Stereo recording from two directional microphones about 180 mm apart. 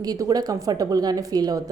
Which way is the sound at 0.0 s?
20° right (ahead or behind).